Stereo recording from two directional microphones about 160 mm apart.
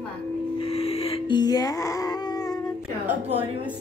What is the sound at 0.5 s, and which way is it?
Music, 40° left (ahead or behind).